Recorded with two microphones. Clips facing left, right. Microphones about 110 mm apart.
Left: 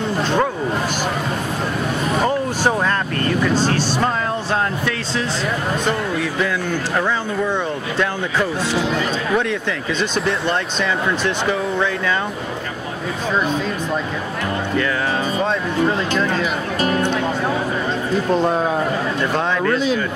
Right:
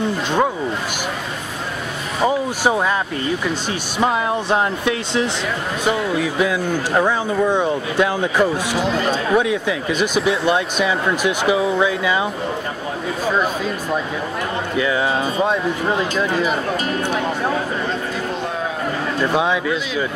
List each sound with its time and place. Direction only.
2.2 s speech: 10° right (ahead or behind)
5.9 s speech: 5° right (ahead or behind)
6.9 s speech: 20° right (ahead or behind)
16.0 s speech: 10° right (ahead or behind)
19.3 s speech: 5° right (ahead or behind)